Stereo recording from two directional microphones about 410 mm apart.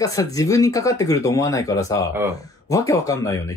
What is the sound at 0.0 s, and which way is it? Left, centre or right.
Speech, centre.